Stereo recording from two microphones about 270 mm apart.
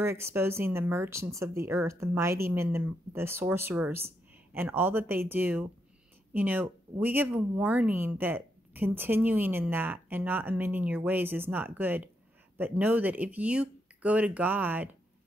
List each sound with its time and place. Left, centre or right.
0.0 s speech: centre